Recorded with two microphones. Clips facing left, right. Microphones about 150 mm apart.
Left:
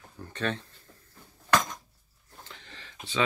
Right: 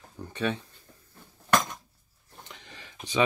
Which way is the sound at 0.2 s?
10° right (ahead or behind).